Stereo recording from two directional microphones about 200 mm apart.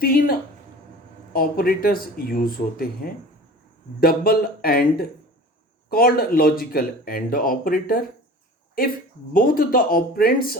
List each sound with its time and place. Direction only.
0.0 s speech: 50° left (ahead or behind)
9.3 s speech: 45° left (ahead or behind)